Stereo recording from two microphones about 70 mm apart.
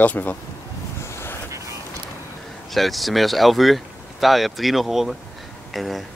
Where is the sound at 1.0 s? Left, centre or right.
Left.